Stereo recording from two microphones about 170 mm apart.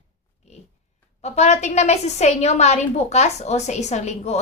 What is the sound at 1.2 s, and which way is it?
Speech, 40° left (ahead or behind).